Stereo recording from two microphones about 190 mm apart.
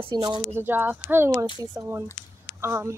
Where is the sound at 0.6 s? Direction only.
10° right (ahead or behind).